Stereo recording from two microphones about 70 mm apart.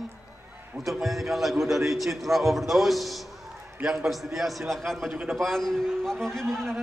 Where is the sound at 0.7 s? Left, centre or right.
Centre.